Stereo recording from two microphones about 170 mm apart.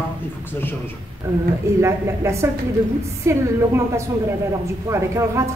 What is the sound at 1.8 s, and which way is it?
A woman's voice, 15° right (ahead or behind).